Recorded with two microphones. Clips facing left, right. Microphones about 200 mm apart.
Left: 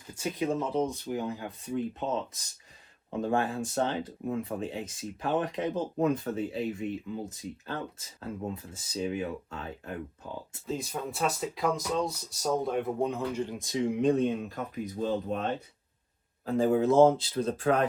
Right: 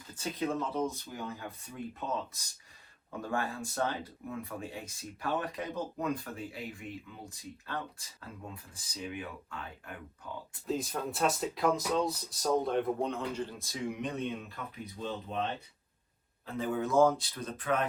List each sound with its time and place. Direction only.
0.1 s speech: 15° left (ahead or behind)
3.1 s speech: 25° left (ahead or behind)
10.7 s speech: centre (ahead or behind); by 14.2 s 30° left (ahead or behind)
14.3 s speech: 45° left (ahead or behind)
16.5 s speech: 35° left (ahead or behind)